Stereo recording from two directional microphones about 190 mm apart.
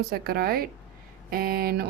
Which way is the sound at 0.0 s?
55° right (ahead or behind).